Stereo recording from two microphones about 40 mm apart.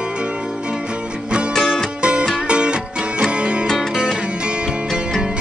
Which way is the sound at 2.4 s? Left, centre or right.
Right.